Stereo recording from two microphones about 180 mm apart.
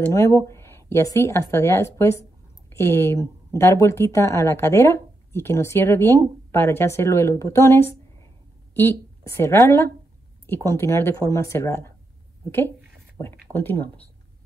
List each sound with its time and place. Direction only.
0.0 s a woman's voice: 15° left (ahead or behind)